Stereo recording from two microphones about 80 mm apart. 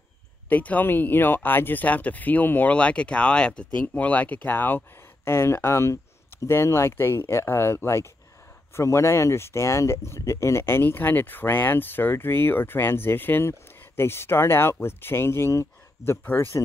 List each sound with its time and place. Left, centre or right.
0.5 s speech: centre